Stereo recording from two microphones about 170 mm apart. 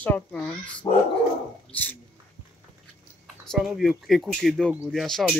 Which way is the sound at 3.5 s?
Centre (ahead or behind).